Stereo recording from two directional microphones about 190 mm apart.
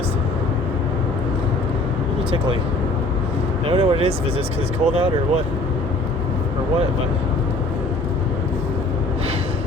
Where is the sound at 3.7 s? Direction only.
30° right (ahead or behind).